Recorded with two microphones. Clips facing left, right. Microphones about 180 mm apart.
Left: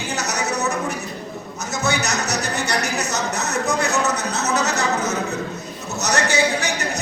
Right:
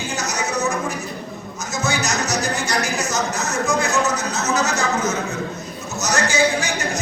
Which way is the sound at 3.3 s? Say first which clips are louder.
Right 1 dB; 65° left (ahead or behind).